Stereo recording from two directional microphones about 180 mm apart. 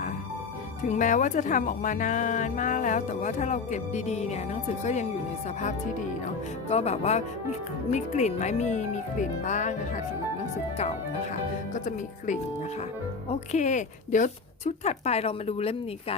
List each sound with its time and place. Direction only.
0.9 s speech: 45° left (ahead or behind)
6.7 s speech: 35° left (ahead or behind)
11.7 s speech: 45° left (ahead or behind)
13.5 s speech: 40° left (ahead or behind)